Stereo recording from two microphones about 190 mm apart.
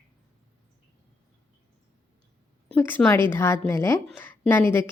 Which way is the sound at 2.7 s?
10° left (ahead or behind).